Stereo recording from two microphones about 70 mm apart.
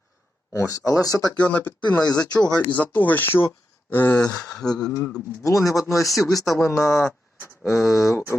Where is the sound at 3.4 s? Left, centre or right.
Left.